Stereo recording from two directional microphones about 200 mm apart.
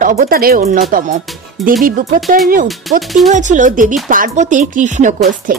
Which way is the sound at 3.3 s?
40° right (ahead or behind).